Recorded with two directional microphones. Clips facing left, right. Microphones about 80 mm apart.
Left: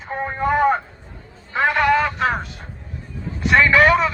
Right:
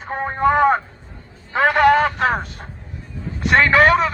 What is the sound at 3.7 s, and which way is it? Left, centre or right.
Speech, right.